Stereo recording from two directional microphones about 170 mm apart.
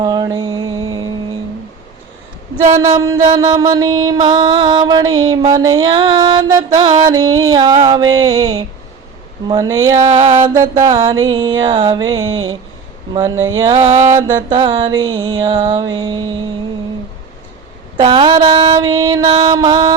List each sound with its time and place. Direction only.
0.0 s mantra: 25° right (ahead or behind)
3.2 s mantra: 25° right (ahead or behind)
17.9 s mantra: 30° right (ahead or behind)